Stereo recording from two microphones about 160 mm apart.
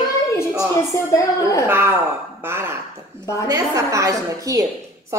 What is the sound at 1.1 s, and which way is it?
Speech, 20° left (ahead or behind).